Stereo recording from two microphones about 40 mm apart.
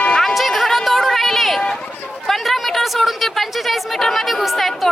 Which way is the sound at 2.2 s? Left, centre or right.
Centre.